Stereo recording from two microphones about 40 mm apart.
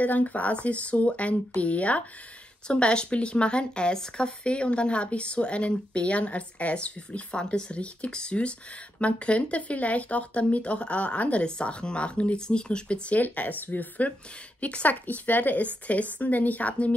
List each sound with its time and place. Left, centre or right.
0.0 s speech: left
2.7 s speech: left
13.1 s speech: left